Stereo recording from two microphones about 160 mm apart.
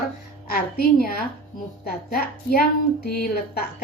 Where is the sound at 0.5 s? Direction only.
70° left (ahead or behind).